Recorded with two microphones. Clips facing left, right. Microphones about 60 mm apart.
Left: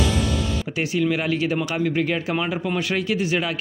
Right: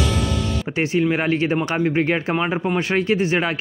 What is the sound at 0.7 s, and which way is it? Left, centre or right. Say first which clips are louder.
Speech: right 3 dB; right.